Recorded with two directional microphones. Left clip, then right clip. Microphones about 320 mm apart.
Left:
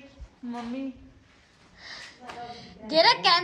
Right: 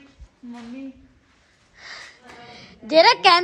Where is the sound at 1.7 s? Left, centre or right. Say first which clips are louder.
Right 4 dB; centre.